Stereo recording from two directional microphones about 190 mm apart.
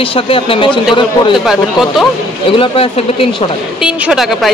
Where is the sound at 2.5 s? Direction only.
30° left (ahead or behind).